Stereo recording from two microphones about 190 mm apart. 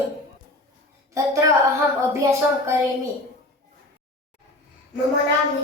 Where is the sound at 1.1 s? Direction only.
15° right (ahead or behind).